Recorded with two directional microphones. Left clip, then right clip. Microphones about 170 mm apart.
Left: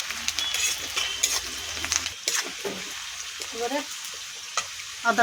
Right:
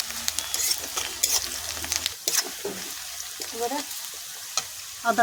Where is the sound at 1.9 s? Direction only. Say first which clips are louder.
Even; 55° right (ahead or behind).